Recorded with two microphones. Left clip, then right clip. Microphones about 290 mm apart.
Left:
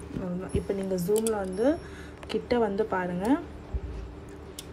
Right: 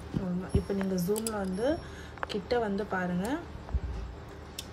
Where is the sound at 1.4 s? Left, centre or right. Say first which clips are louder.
Left 4 dB; left.